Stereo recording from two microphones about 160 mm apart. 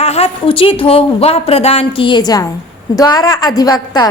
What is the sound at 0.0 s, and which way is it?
A woman's voice, 40° left (ahead or behind).